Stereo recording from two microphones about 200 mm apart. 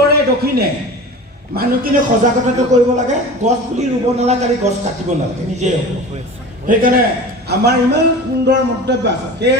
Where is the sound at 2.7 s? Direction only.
35° right (ahead or behind).